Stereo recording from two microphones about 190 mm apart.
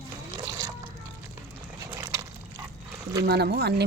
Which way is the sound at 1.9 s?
15° right (ahead or behind).